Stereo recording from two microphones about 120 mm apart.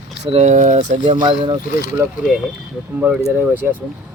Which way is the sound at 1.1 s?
45° right (ahead or behind).